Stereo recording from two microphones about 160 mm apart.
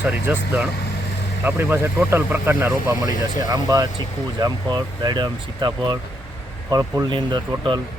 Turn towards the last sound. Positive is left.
turn(degrees=-30)  # may be behind; listen again after turning